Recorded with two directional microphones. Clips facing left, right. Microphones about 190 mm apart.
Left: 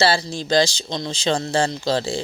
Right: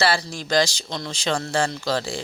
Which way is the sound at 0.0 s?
25° left (ahead or behind).